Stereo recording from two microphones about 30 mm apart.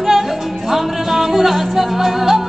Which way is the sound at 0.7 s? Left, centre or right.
Centre.